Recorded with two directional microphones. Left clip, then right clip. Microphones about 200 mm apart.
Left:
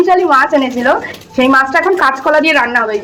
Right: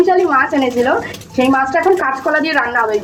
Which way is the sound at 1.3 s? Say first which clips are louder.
Left 4 dB; centre (ahead or behind).